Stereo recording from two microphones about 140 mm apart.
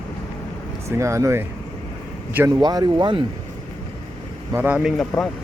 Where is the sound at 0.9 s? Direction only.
20° right (ahead or behind).